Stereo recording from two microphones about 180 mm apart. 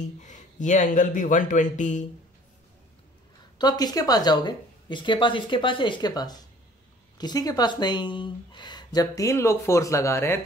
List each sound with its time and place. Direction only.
0.2 s speech: 45° left (ahead or behind)
3.5 s speech: 20° left (ahead or behind)